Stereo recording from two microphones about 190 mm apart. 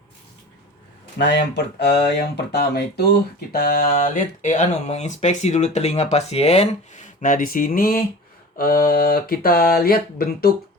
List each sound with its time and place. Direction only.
1.2 s speech: 65° left (ahead or behind)